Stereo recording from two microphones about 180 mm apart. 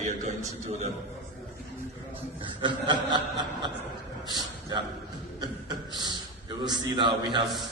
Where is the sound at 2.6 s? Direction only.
25° right (ahead or behind).